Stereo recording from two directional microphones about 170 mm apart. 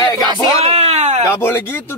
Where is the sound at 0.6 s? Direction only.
40° right (ahead or behind).